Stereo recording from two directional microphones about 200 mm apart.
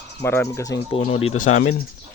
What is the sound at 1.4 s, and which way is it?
Speech, 90° left.